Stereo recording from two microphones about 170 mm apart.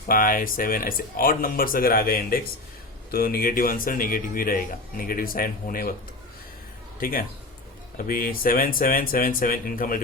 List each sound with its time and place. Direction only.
0.1 s speech: 55° left (ahead or behind)
7.0 s speech: 55° left (ahead or behind)